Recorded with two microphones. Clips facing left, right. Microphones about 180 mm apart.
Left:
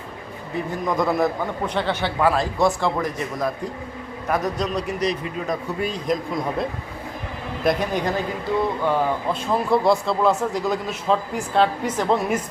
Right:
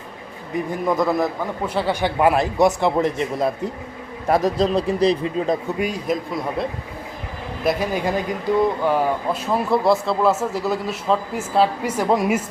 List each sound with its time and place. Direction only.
0.9 s a man's voice: centre (ahead or behind); by 5.5 s 30° right (ahead or behind)
5.8 s speech: 5° right (ahead or behind)